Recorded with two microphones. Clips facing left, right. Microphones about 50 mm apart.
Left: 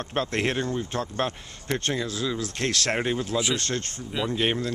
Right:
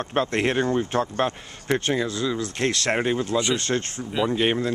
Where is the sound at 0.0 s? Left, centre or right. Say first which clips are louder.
Right 3 dB; centre.